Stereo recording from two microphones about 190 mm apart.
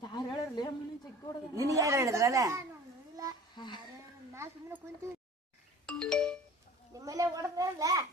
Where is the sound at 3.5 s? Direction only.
25° left (ahead or behind).